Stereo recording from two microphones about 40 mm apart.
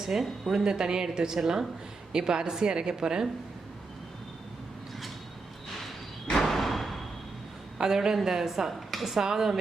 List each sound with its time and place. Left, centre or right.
0.0 s a woman's voice: centre
0.6 s a woman's voice: centre
6.3 s a sound: centre
7.8 s a woman's voice: centre
9.2 s a woman's voice: centre